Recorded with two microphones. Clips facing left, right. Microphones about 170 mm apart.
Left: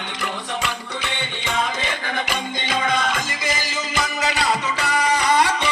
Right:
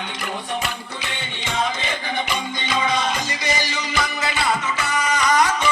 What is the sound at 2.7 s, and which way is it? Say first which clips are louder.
Music: even; 50° left (ahead or behind).